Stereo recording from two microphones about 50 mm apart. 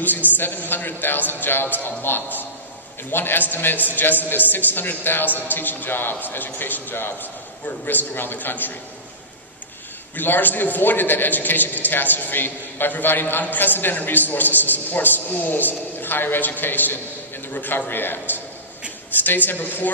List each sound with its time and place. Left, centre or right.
0.4 s a man's voice: left
10.1 s a man's voice: left